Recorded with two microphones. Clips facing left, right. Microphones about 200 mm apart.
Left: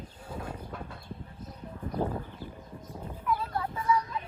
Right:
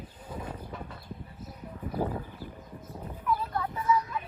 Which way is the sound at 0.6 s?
10° right (ahead or behind).